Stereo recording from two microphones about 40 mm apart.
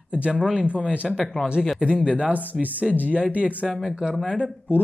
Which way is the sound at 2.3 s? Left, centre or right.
Right.